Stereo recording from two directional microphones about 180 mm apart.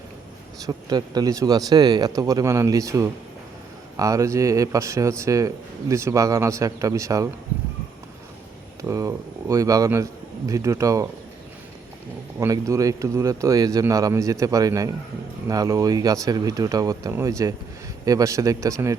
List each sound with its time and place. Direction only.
0.6 s speech: 20° right (ahead or behind)
8.8 s speech: 20° right (ahead or behind)
12.4 s speech: 15° right (ahead or behind)